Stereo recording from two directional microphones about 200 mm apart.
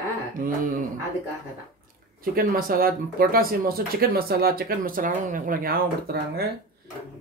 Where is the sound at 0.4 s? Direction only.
40° right (ahead or behind).